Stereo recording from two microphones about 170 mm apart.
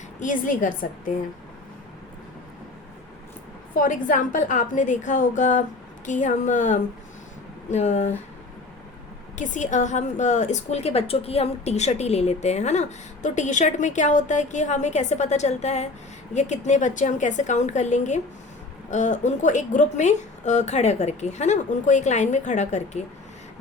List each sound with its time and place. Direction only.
0.2 s a woman's voice: 50° left (ahead or behind)
3.8 s a woman's voice: 50° left (ahead or behind)
9.4 s a woman's voice: 45° left (ahead or behind)